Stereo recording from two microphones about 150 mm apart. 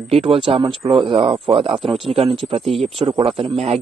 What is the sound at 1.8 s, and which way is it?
Speech, centre (ahead or behind).